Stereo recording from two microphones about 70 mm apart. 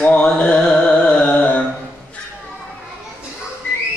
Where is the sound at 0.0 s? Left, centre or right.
Centre.